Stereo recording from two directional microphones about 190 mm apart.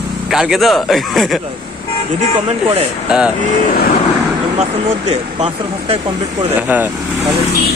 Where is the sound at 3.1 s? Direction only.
5° right (ahead or behind).